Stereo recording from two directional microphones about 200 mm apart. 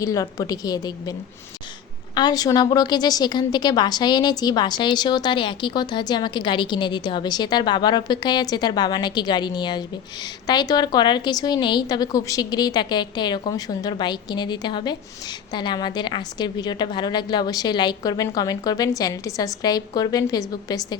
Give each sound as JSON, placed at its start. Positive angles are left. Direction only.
{"t": 0.0, "sound": "a woman's voice", "side_deg": 15}
{"t": 2.1, "sound": "a woman's voice", "side_deg": 20}